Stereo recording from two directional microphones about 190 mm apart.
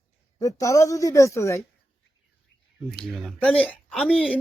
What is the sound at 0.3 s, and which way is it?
A woman's voice, 15° left (ahead or behind).